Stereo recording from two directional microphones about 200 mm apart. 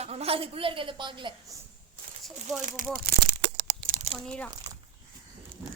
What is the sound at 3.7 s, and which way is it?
Crumpling, 45° right (ahead or behind).